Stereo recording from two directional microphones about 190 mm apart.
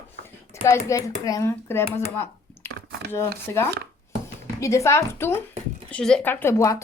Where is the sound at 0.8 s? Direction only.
15° left (ahead or behind).